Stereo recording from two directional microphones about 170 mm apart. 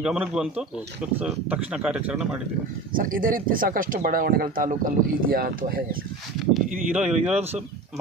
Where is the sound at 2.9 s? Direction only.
55° right (ahead or behind).